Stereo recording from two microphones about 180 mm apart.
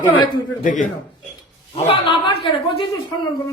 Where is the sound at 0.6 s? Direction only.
45° left (ahead or behind).